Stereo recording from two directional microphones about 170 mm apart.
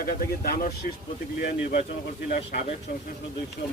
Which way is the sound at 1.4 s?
50° left (ahead or behind).